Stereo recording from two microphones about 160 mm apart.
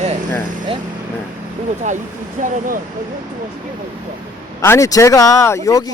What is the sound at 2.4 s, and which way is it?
Speech, 50° right (ahead or behind).